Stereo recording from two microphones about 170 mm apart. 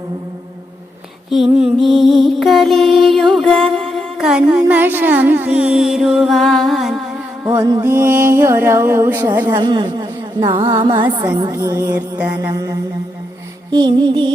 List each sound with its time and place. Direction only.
1.3 s music: centre (ahead or behind)
7.4 s music: 20° right (ahead or behind)
9.6 s a woman's voice: 25° right (ahead or behind)
11.5 s music: 20° right (ahead or behind)
11.9 s music: 10° right (ahead or behind); by 14.3 s 25° right (ahead or behind)